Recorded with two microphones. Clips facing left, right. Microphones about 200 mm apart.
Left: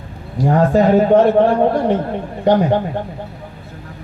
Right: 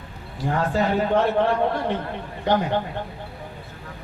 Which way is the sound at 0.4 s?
40° left (ahead or behind).